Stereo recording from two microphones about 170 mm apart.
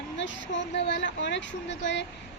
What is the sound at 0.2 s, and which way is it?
A woman's voice, 90° left.